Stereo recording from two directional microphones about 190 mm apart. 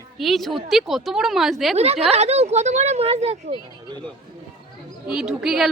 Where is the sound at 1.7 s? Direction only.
30° right (ahead or behind).